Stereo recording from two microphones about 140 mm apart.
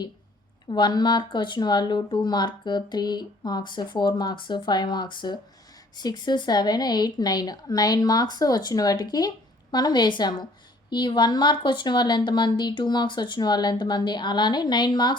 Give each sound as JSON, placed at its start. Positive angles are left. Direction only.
{"t": 0.7, "sound": "speech", "side_deg": 30}